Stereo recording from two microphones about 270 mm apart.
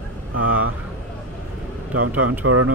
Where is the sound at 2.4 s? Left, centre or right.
Right.